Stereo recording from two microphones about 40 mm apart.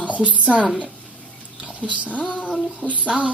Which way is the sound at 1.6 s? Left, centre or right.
Right.